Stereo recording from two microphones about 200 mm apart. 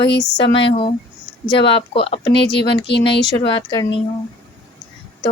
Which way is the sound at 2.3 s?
60° left (ahead or behind).